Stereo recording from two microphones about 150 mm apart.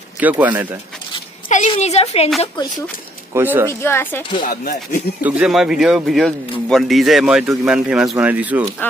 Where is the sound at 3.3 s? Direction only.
15° right (ahead or behind).